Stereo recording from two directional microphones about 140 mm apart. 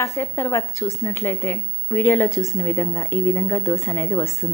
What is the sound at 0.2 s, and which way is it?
A woman's voice, 20° left (ahead or behind).